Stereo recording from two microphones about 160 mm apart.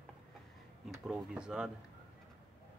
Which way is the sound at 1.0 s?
5° right (ahead or behind).